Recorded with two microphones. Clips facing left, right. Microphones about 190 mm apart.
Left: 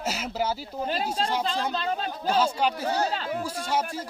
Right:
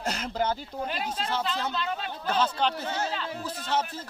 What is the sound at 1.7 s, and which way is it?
Speech, 35° left (ahead or behind).